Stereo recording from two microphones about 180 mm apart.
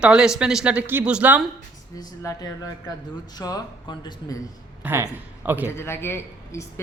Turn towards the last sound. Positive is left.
turn(degrees=15)  # may be behind; listen again after turning